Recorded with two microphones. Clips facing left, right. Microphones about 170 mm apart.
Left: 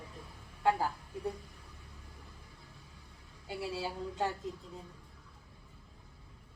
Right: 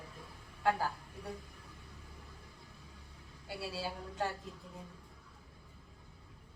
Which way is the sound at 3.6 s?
20° left (ahead or behind).